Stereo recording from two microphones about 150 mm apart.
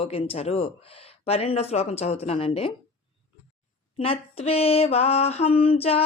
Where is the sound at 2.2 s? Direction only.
40° left (ahead or behind).